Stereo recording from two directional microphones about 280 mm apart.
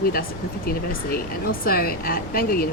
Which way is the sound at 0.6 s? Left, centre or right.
Left.